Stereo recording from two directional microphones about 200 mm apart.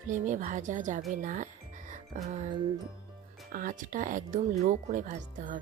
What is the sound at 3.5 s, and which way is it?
Speech, 40° right (ahead or behind).